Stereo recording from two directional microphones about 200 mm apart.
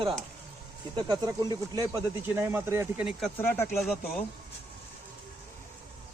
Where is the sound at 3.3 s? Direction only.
10° left (ahead or behind).